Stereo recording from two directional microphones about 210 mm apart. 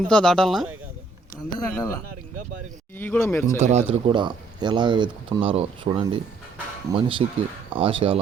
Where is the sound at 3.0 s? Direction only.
10° left (ahead or behind).